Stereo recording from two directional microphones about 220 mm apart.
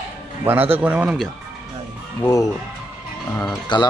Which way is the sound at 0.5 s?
10° right (ahead or behind).